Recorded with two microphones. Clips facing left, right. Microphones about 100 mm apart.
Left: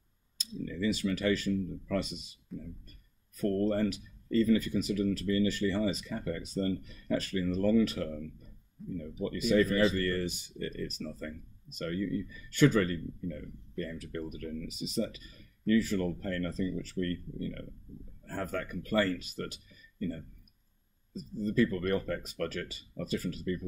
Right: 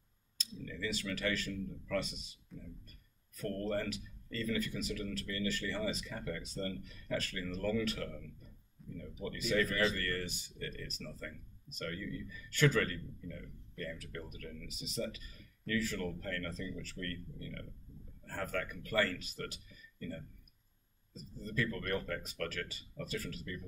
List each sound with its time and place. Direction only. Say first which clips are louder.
0.4 s speech: left 8 dB; 20° left (ahead or behind)
2.5 s speech: left 9 dB; centre (ahead or behind)
3.3 s speech: left 8 dB; 20° left (ahead or behind)
8.8 s speech: left 10 dB; centre (ahead or behind)
9.2 s speech: left 7 dB; 20° left (ahead or behind)
12.4 s speech: left 6 dB; 20° left (ahead or behind)
21.5 s speech: left 7 dB; 20° left (ahead or behind)